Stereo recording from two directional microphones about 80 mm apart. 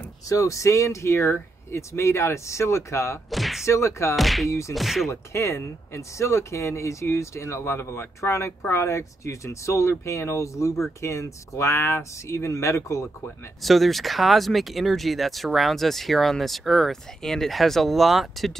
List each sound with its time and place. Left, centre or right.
0.3 s speech: left
3.3 s a sound: centre
3.6 s speech: left
4.2 s speech: centre
4.5 s speech: left
4.7 s speech: centre
5.1 s speech: left
13.6 s speech: centre